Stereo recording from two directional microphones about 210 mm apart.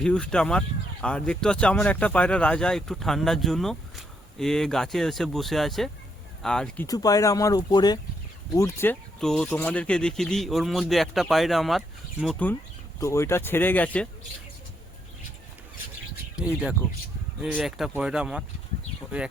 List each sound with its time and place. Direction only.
0.0 s speech: 5° left (ahead or behind)
6.8 s speech: 15° left (ahead or behind)
13.0 s speech: 15° left (ahead or behind)
16.3 s speech: 5° right (ahead or behind)